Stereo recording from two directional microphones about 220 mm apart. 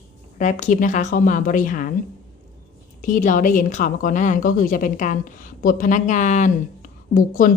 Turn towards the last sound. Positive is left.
turn(degrees=40)  # may be behind; listen again after turning